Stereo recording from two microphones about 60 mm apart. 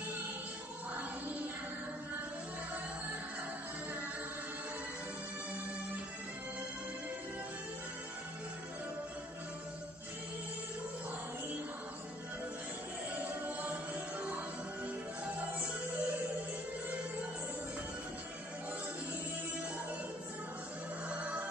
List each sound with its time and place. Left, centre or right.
13.2 s music: right
21.1 s music: right